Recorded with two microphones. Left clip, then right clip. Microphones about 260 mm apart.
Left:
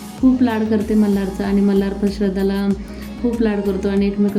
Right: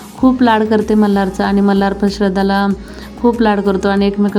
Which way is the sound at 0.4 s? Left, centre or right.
Right.